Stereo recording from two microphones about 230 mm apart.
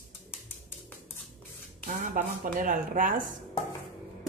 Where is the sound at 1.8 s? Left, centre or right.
Right.